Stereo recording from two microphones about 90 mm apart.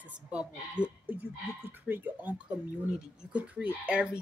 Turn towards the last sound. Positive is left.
turn(degrees=-10)  # may be behind; listen again after turning